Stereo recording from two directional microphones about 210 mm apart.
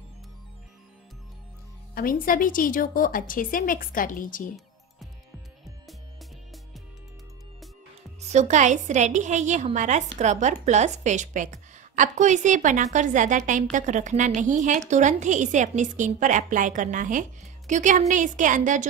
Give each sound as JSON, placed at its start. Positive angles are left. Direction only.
{"t": 2.0, "sound": "a woman's voice", "side_deg": 40}
{"t": 8.3, "sound": "a woman's voice", "side_deg": -35}